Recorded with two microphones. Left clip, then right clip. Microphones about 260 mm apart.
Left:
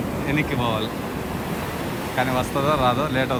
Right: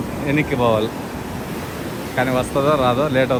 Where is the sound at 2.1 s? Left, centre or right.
Centre.